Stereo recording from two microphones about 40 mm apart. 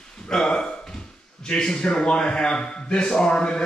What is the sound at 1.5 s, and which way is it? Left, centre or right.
A man's voice, centre.